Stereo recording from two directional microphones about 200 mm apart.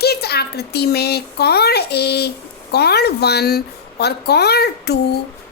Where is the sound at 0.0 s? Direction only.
55° left (ahead or behind).